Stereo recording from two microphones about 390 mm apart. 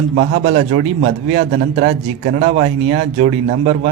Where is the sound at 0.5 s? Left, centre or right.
Centre.